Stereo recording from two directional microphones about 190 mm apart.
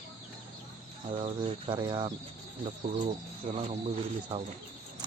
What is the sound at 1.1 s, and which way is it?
Cricket, 30° right (ahead or behind).